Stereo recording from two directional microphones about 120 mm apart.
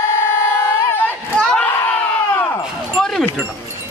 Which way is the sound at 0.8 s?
20° left (ahead or behind).